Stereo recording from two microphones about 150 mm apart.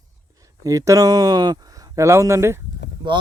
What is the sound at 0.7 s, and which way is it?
Speech, 20° right (ahead or behind).